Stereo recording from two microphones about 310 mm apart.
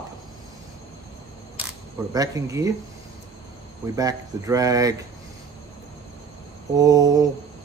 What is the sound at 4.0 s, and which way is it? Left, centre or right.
Speech, centre.